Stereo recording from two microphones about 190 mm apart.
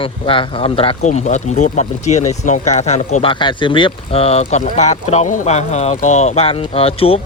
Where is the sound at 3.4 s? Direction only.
25° left (ahead or behind).